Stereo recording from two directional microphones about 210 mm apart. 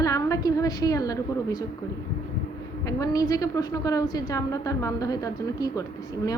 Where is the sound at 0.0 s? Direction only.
15° left (ahead or behind).